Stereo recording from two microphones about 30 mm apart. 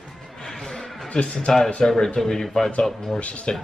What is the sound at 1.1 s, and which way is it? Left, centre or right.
Speech, left.